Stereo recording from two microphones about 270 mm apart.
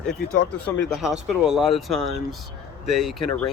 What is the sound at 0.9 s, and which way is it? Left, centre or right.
Speech, centre.